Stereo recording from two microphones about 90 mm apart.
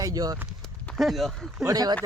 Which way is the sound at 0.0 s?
45° right (ahead or behind).